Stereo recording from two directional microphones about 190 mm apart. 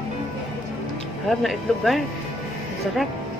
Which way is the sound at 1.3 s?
Centre (ahead or behind).